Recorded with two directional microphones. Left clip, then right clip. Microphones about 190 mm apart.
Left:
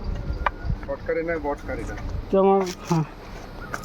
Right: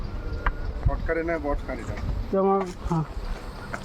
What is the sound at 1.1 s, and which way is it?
Speech, 30° right (ahead or behind).